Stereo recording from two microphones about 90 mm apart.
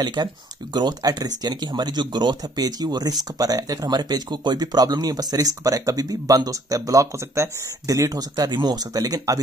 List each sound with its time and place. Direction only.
0.0 s speech: 55° right (ahead or behind)